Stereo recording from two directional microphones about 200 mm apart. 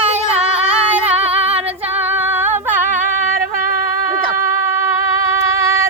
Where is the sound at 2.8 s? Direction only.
40° right (ahead or behind).